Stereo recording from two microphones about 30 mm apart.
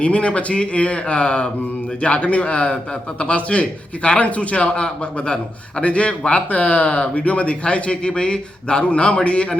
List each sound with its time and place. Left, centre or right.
0.0 s a man's voice: left
5.2 s a man's voice: left
5.8 s a man's voice: left